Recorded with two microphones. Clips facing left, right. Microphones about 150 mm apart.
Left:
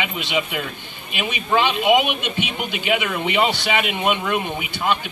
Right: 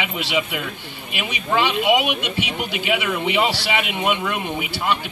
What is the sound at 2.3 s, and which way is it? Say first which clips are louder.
Speech: even; 90° right.